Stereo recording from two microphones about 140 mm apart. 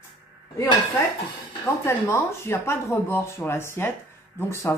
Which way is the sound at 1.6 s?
20° left (ahead or behind).